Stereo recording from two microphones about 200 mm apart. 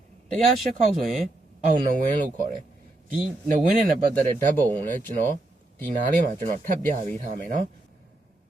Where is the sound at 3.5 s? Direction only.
45° right (ahead or behind).